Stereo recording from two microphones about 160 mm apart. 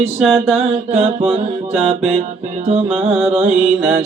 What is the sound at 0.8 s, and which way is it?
Music, 40° right (ahead or behind).